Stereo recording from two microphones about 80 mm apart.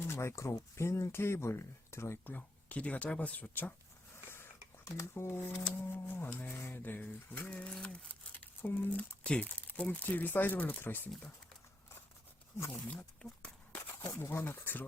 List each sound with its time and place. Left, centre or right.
0.1 s speech: left
2.2 s speech: centre
4.9 s speech: left
12.7 s a sound: centre
14.1 s speech: left